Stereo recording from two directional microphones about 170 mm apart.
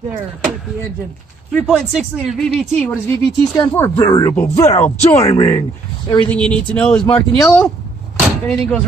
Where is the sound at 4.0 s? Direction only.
20° left (ahead or behind).